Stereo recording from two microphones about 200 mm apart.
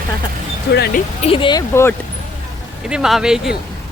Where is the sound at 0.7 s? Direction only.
55° left (ahead or behind).